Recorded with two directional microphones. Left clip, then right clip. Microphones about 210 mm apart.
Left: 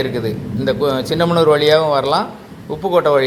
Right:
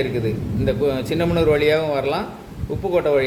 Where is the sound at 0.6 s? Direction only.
5° left (ahead or behind).